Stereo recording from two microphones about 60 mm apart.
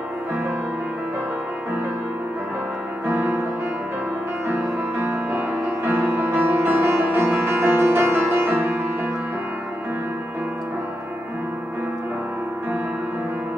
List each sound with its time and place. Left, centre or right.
3.1 s music: right
4.9 s music: right